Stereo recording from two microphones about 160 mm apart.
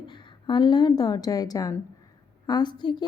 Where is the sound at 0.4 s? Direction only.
30° left (ahead or behind).